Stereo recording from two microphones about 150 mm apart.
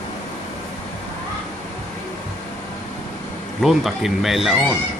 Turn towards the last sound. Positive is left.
turn(degrees=0)  # may be behind; listen again after turning